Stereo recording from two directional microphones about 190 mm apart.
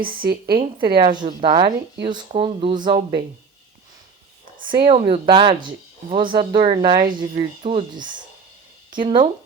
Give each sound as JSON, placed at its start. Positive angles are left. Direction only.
{"t": 0.0, "sound": "speech", "side_deg": -50}
{"t": 0.5, "sound": "speech", "side_deg": -25}
{"t": 4.6, "sound": "speech", "side_deg": -25}